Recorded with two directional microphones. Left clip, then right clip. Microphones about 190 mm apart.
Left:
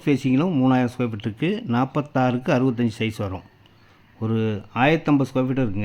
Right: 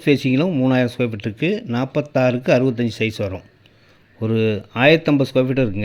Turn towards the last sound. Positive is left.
turn(degrees=-5)  # may be behind; listen again after turning